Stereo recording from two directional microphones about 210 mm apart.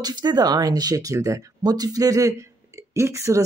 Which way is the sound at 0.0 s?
20° right (ahead or behind).